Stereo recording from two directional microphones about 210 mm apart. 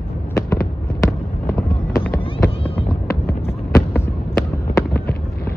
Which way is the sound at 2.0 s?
10° left (ahead or behind).